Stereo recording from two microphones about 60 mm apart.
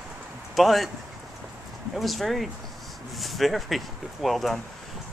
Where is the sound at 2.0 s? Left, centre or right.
Centre.